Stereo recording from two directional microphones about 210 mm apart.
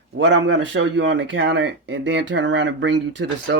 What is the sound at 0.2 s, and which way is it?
Speech, 55° right (ahead or behind).